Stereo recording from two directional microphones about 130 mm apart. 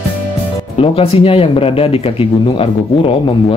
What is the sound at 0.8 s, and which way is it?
Speech, 45° left (ahead or behind).